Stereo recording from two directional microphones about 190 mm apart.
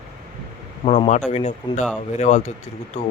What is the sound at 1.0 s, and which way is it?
Speech, 40° left (ahead or behind).